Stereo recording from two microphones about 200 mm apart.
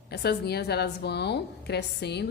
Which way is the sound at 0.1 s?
55° left (ahead or behind).